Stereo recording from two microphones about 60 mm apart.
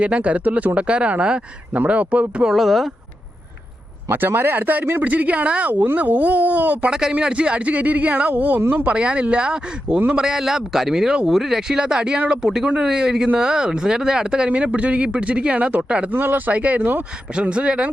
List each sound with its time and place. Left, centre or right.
0.0 s speech: right
2.5 s speech: centre
4.1 s speech: right
6.9 s speech: centre
16.1 s speech: right; by 17.8 s centre